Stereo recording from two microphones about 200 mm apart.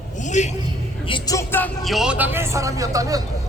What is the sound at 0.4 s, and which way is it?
Speech, 35° left (ahead or behind).